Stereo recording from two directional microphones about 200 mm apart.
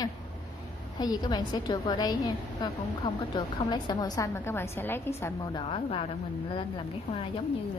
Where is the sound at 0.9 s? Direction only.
20° left (ahead or behind).